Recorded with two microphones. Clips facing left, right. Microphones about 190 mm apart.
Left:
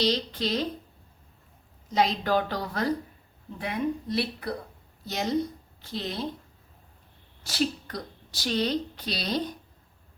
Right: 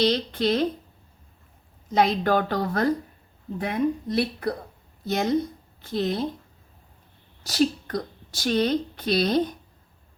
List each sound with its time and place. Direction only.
0.0 s speech: 55° right (ahead or behind)
1.9 s speech: 55° right (ahead or behind)
7.4 s speech: 45° right (ahead or behind)